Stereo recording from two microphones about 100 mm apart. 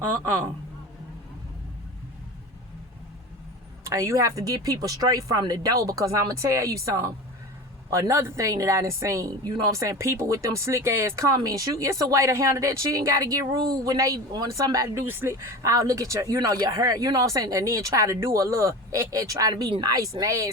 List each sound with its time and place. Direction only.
0.0 s speech: 20° right (ahead or behind)
3.8 s speech: 30° right (ahead or behind)
15.0 s speech: 25° right (ahead or behind)